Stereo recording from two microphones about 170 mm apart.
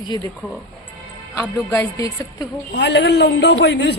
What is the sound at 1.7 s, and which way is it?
Speech, 15° left (ahead or behind).